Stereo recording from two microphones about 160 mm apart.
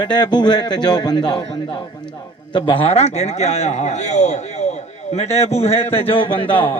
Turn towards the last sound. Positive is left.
turn(degrees=35)  # may be behind; listen again after turning